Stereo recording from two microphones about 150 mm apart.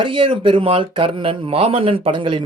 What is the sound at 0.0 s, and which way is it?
Speech, 35° right (ahead or behind).